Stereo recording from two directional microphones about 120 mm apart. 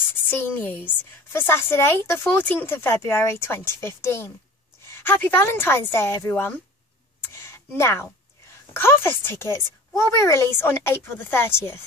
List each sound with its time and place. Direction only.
0.3 s a woman's voice: 15° left (ahead or behind)
7.3 s a sound: 20° left (ahead or behind)
8.7 s speech: 20° left (ahead or behind)